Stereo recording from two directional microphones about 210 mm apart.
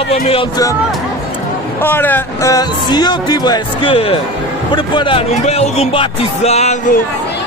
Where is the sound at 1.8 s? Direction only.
10° left (ahead or behind).